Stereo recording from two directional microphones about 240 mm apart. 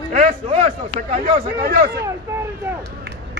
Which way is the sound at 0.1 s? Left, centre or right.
Right.